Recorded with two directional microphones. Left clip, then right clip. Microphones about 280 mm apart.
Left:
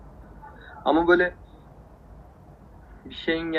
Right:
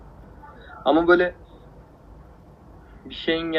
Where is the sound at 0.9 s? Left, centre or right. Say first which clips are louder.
Right 2 dB; centre.